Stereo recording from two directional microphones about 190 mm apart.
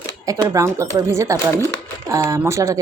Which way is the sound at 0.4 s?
15° right (ahead or behind).